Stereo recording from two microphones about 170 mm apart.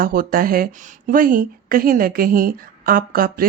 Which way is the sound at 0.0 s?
55° right (ahead or behind).